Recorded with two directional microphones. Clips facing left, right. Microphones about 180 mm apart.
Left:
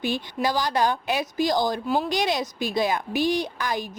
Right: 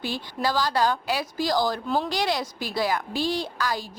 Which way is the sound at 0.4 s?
20° left (ahead or behind).